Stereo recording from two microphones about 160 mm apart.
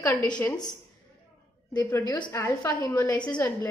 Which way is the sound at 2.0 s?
30° left (ahead or behind).